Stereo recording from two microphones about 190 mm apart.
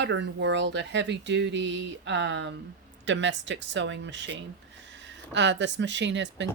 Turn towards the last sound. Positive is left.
turn(degrees=-70)  # may be behind; listen again after turning